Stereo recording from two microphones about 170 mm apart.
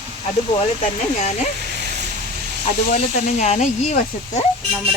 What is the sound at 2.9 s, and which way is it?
Speech, 40° left (ahead or behind).